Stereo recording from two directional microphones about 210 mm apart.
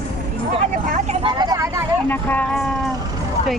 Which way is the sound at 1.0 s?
20° right (ahead or behind).